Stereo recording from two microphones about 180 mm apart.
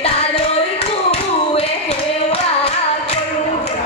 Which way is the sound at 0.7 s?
35° left (ahead or behind).